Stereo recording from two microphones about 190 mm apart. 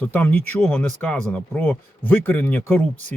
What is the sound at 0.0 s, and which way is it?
Speech, 10° left (ahead or behind).